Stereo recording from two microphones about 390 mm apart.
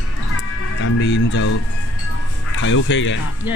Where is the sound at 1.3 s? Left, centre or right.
Left.